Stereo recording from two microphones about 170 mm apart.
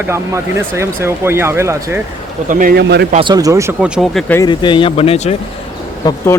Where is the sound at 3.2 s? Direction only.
20° right (ahead or behind).